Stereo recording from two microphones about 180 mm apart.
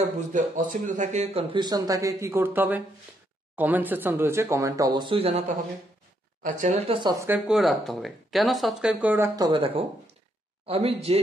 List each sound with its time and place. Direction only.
0.0 s speech: 45° right (ahead or behind)
6.4 s speech: 45° right (ahead or behind)
7.0 s speech: 20° right (ahead or behind)
7.2 s speech: 5° right (ahead or behind)
9.4 s speech: 30° right (ahead or behind)